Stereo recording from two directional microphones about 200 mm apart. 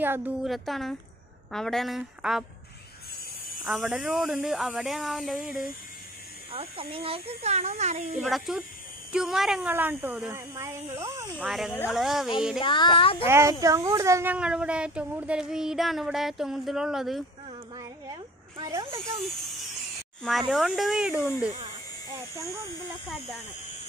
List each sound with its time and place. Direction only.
0.0 s speech: 10° right (ahead or behind)
3.6 s speech: 5° right (ahead or behind)
6.5 s speech: 25° right (ahead or behind)
8.2 s speech: centre (ahead or behind)
11.4 s speech: centre (ahead or behind)
12.5 s a sound: 25° left (ahead or behind)
13.3 s speech: 15° right (ahead or behind)
17.7 s a sound: 20° right (ahead or behind)
20.2 s speech: centre (ahead or behind)